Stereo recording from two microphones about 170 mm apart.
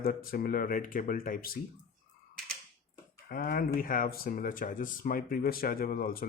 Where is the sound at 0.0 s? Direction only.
60° left (ahead or behind).